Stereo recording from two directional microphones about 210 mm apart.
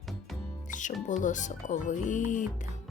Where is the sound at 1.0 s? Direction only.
35° left (ahead or behind).